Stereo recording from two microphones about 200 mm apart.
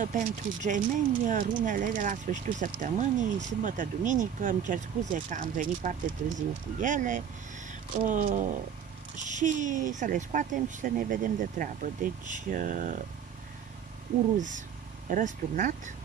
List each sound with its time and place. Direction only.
0.0 s speech: 40° right (ahead or behind)
15.0 s speech: 40° right (ahead or behind)